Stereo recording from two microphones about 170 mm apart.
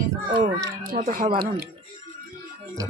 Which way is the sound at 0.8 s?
55° right (ahead or behind).